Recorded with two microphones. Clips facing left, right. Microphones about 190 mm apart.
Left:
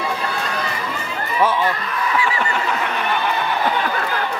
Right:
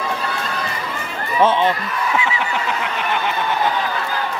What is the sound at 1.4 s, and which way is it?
Speech, 25° right (ahead or behind).